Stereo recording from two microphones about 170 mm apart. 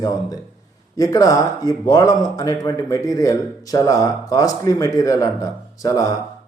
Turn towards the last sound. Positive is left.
turn(degrees=20)  # may be behind; listen again after turning